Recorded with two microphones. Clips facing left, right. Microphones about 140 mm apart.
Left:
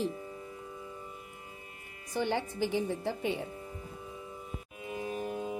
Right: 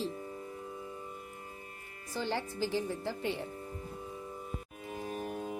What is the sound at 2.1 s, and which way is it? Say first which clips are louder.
A woman's voice: left 3 dB; 20° left (ahead or behind).